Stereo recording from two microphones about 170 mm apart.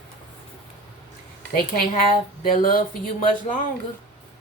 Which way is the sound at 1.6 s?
55° left (ahead or behind).